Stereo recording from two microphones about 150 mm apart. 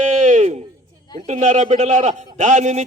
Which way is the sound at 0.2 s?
50° right (ahead or behind).